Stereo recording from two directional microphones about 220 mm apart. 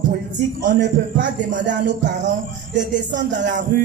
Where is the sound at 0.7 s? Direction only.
50° right (ahead or behind).